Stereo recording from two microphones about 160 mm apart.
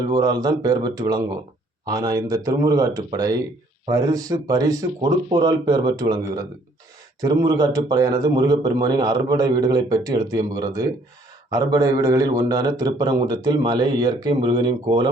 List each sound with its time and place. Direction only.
0.0 s a man's voice: 25° right (ahead or behind)